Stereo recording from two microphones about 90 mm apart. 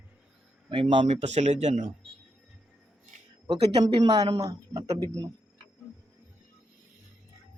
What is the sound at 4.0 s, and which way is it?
Mantra, 55° right (ahead or behind).